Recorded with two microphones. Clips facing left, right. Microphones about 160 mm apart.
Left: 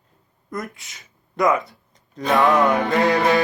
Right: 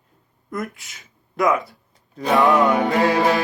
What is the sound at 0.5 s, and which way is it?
Speech, 5° right (ahead or behind).